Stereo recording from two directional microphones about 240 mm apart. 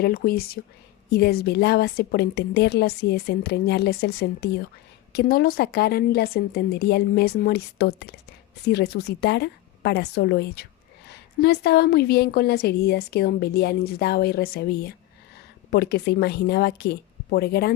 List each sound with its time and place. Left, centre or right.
0.0 s a woman's voice: left